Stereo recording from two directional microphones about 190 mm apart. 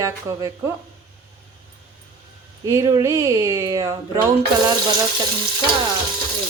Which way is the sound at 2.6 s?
15° right (ahead or behind).